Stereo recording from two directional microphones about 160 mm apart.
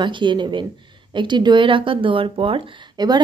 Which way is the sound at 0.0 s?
30° right (ahead or behind).